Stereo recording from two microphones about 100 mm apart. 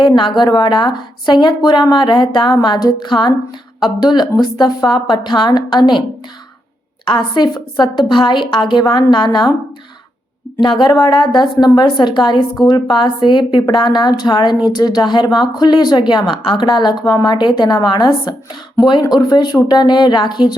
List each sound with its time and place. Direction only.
0.2 s speech: 50° left (ahead or behind)
7.0 s speech: 50° left (ahead or behind)
10.6 s speech: 50° left (ahead or behind)